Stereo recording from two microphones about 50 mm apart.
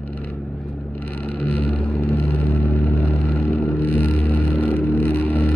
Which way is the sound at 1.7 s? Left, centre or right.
Left.